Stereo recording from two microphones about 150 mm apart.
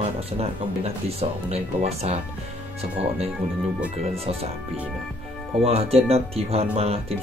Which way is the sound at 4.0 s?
40° right (ahead or behind).